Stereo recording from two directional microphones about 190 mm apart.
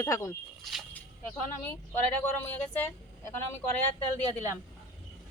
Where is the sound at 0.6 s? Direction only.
Centre (ahead or behind).